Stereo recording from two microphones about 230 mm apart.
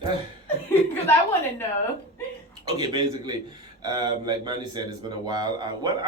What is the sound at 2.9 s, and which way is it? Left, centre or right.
Speech, centre.